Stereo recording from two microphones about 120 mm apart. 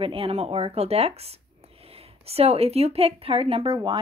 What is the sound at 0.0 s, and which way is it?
A woman's voice, 50° right (ahead or behind).